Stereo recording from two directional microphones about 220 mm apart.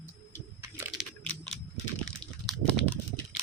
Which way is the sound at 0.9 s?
5° left (ahead or behind).